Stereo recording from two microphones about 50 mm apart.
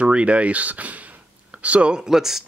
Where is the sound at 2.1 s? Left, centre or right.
Centre.